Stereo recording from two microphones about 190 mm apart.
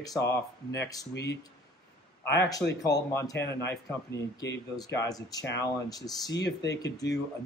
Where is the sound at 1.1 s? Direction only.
60° left (ahead or behind).